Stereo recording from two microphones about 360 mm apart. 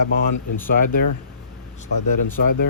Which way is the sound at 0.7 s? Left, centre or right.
Left.